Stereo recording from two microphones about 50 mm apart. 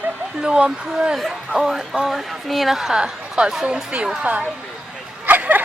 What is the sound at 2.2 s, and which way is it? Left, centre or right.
A woman's voice, centre.